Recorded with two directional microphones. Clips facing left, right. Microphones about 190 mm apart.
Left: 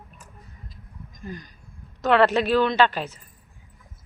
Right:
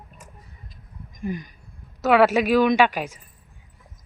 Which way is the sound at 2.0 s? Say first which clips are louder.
Right 2 dB; 10° right (ahead or behind).